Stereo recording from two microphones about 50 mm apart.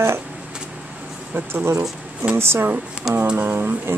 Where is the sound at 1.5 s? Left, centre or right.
Right.